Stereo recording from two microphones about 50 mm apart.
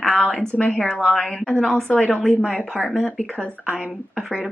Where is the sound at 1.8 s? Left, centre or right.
Left.